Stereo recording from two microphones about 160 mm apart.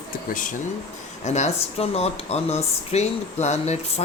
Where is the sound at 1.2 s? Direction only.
45° left (ahead or behind).